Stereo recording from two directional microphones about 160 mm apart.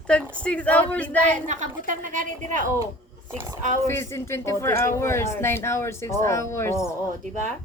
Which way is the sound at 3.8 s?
15° left (ahead or behind).